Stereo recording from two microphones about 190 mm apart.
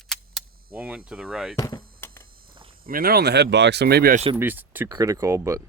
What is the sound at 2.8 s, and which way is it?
Speech, 50° right (ahead or behind).